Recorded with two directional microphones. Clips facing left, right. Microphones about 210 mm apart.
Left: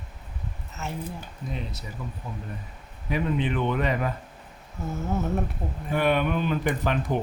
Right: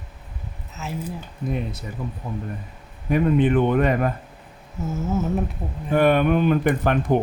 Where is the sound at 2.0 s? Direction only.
50° right (ahead or behind).